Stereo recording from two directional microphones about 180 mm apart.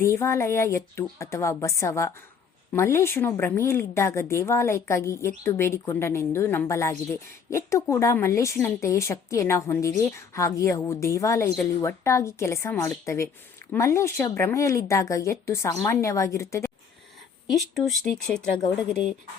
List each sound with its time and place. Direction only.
0.0 s a woman's voice: 15° left (ahead or behind)
17.5 s speech: centre (ahead or behind)